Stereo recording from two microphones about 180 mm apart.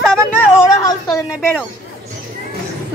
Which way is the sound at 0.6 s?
20° left (ahead or behind).